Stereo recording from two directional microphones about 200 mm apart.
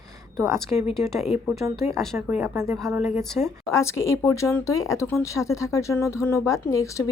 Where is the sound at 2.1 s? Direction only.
10° right (ahead or behind).